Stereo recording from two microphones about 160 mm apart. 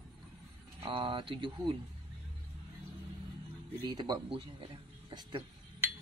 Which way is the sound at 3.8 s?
25° right (ahead or behind).